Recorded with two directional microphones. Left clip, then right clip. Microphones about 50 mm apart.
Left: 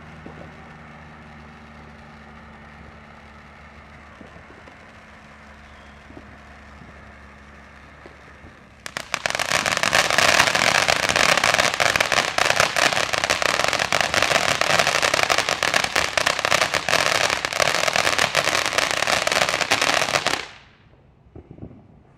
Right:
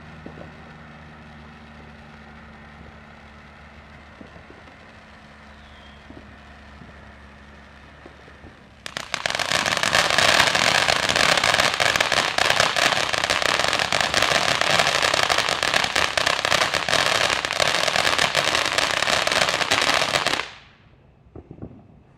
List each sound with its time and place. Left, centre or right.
8.8 s fireworks: left